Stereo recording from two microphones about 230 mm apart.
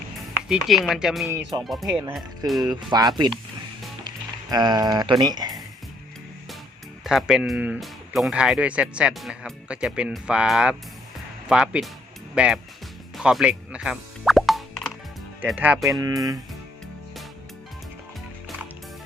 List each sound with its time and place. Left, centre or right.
0.4 s speech: centre
2.6 s speech: centre
7.0 s speech: centre
13.1 s plop: centre
15.4 s speech: centre
16.0 s speech: centre